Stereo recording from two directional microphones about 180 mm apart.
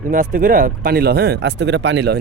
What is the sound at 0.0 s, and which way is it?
Speech, 50° right (ahead or behind).